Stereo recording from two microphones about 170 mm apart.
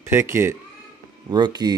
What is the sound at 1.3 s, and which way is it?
Speech, 25° right (ahead or behind).